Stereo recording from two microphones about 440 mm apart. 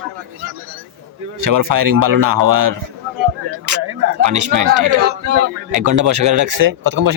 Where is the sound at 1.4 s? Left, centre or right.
Right.